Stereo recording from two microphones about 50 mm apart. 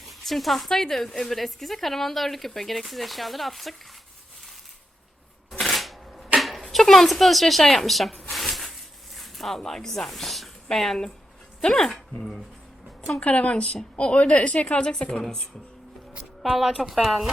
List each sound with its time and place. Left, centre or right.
0.1 s a woman's voice: centre
5.5 s shuffling cards: centre
6.3 s a sound: centre
6.6 s speech: centre
13.1 s a woman's voice: left
16.4 s a woman's voice: centre